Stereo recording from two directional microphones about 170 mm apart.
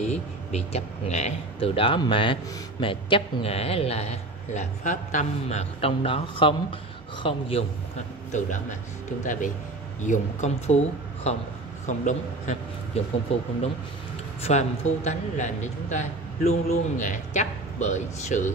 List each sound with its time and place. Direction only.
0.0 s a man's voice: 40° left (ahead or behind)
8.3 s a man's voice: 45° left (ahead or behind)